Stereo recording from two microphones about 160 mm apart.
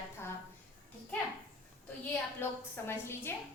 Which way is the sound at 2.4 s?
15° left (ahead or behind).